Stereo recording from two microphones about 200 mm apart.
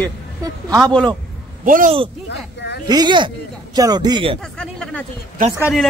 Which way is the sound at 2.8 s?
20° right (ahead or behind).